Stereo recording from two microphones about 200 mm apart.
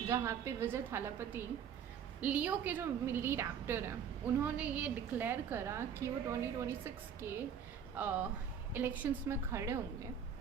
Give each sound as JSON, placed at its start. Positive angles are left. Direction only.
{"t": 0.1, "sound": "a woman's voice", "side_deg": -15}